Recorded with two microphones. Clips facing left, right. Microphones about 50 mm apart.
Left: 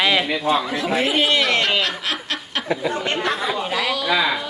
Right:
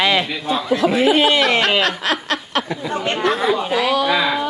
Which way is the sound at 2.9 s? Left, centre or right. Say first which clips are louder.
Right 2 dB; right.